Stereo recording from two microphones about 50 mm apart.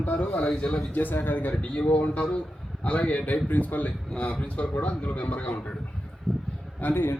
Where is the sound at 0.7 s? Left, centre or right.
Left.